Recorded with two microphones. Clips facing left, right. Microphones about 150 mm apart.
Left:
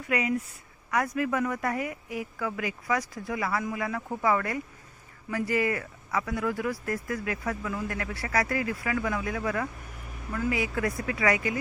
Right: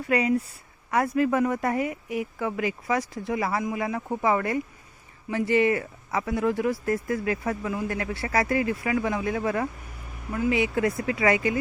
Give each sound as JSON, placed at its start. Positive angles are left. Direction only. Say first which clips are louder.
{"t": 0.1, "sound": "speech", "louder": "right 4 dB", "side_deg": -30}